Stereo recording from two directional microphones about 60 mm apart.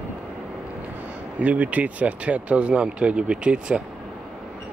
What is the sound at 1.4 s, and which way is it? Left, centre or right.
Speech, right.